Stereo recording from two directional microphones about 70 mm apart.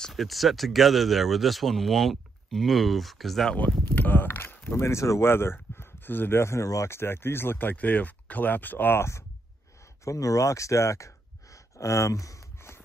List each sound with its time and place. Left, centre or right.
0.0 s speech: centre
3.9 s speech: left
4.6 s speech: left
5.3 s speech: left
10.0 s a sound: left